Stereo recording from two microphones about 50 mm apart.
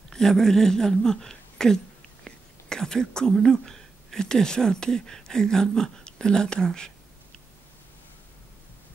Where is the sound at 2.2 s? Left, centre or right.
Centre.